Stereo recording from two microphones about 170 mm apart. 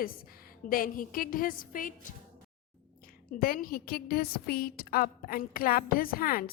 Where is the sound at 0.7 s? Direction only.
55° left (ahead or behind).